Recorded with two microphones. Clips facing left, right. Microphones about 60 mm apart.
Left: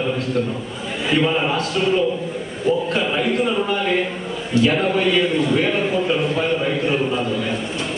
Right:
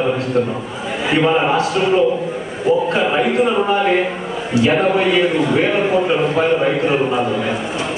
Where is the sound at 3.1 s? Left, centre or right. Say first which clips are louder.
Right 4 dB; right.